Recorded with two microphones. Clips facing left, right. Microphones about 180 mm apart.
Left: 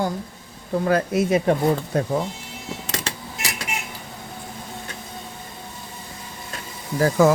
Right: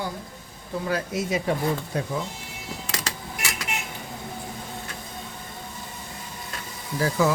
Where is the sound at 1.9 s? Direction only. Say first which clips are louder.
Left 6 dB; 45° left (ahead or behind).